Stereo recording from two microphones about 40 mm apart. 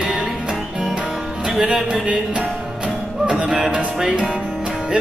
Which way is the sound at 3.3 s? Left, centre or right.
Centre.